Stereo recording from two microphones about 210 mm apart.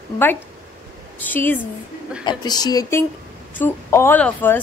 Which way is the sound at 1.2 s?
10° left (ahead or behind).